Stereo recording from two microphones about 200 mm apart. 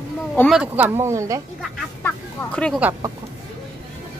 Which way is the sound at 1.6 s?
5° left (ahead or behind).